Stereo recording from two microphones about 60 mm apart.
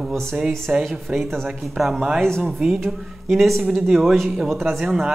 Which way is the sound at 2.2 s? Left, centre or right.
Centre.